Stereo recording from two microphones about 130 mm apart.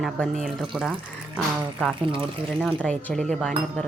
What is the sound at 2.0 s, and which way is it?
Speech, 45° right (ahead or behind).